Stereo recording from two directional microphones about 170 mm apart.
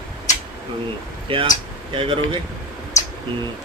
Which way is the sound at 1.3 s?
30° right (ahead or behind).